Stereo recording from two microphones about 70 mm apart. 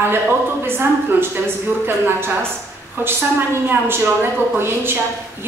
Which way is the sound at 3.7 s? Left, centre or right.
Right.